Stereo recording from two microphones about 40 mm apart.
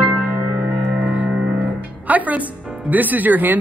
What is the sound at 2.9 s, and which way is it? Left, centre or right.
Speech, right.